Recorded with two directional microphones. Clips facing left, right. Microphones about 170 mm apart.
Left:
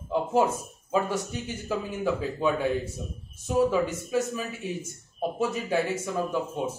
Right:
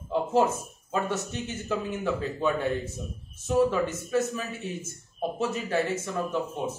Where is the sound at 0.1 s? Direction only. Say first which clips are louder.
Even; 10° left (ahead or behind).